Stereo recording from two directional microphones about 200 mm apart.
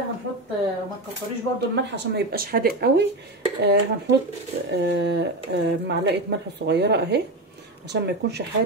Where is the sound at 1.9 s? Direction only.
55° right (ahead or behind).